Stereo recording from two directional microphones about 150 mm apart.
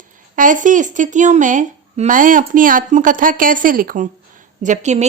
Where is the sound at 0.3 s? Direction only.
60° right (ahead or behind).